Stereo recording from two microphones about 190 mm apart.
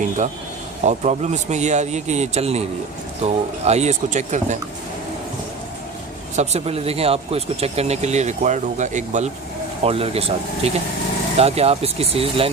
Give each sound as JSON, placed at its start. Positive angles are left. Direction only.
{"t": 0.9, "sound": "speech", "side_deg": -35}
{"t": 6.3, "sound": "speech", "side_deg": -35}